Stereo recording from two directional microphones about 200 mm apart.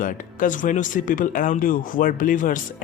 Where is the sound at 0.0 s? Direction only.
40° left (ahead or behind).